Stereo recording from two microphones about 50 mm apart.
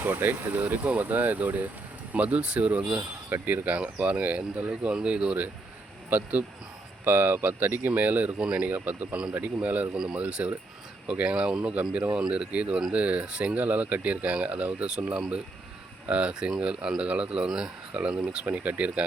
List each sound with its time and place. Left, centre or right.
0.0 s speech: right
3.2 s speech: right
4.7 s speech: centre
6.1 s speech: right
8.4 s speech: centre
8.6 s speech: right
9.9 s a man's voice: centre
10.2 s a man's voice: right
18.4 s speech: right